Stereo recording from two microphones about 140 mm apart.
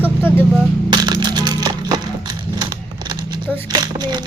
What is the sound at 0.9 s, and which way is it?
Crushing, 30° right (ahead or behind).